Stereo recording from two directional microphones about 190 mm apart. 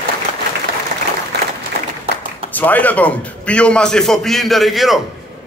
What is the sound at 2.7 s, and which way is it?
A man's voice, 10° left (ahead or behind).